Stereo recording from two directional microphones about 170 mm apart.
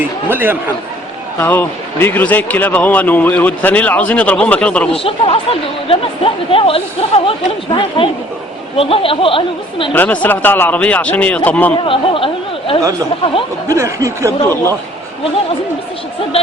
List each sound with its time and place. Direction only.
0.3 s snicker: 10° right (ahead or behind)
1.4 s a man's voice: 10° left (ahead or behind)
5.0 s speech: 35° left (ahead or behind)
9.9 s a man's voice: 10° left (ahead or behind)
11.8 s speech: 30° left (ahead or behind)
13.7 s snicker: 15° right (ahead or behind)
14.4 s a man's voice: 15° left (ahead or behind)